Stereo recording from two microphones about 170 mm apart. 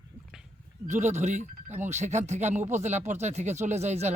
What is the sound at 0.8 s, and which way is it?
Speech, 45° right (ahead or behind).